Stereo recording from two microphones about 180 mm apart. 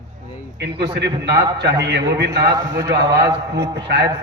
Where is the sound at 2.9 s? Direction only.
70° right (ahead or behind).